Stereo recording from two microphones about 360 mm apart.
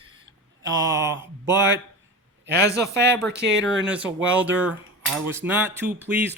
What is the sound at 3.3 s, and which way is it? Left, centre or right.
Speech, right.